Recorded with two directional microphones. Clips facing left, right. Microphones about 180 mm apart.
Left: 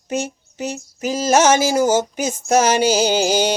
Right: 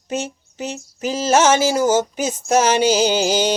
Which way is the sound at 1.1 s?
10° left (ahead or behind).